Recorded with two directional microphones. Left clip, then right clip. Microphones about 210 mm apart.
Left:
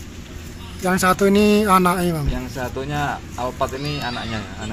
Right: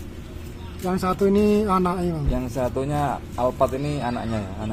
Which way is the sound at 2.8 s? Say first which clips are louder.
Even; 55° right (ahead or behind).